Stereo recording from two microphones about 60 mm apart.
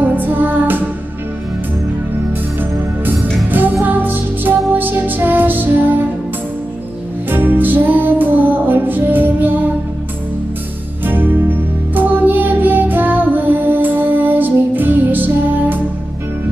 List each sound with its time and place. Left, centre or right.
0.0 s music: right
3.8 s music: right
7.2 s music: right
11.1 s music: right